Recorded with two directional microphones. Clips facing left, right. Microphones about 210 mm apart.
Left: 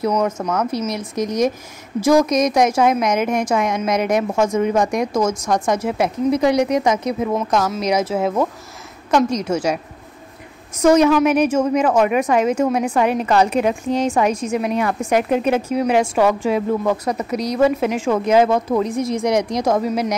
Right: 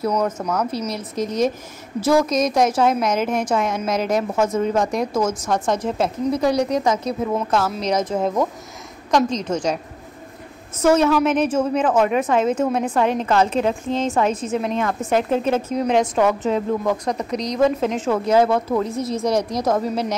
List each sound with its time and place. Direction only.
0.2 s a woman's voice: 5° left (ahead or behind)
10.8 s a woman's voice: 15° left (ahead or behind)